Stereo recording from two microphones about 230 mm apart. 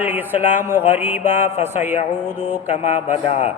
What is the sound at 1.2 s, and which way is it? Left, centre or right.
Speech, left.